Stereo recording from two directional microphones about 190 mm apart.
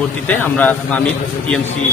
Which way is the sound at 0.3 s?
10° left (ahead or behind).